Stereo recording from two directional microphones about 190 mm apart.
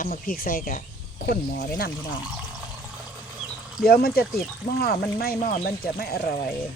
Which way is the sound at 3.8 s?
55° left (ahead or behind).